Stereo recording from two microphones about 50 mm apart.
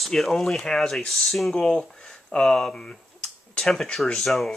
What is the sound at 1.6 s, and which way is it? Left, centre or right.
Speech, centre.